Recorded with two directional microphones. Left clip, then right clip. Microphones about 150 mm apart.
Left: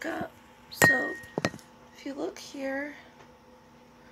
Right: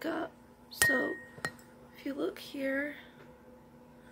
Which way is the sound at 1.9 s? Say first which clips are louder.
Left 1 dB; 20° right (ahead or behind).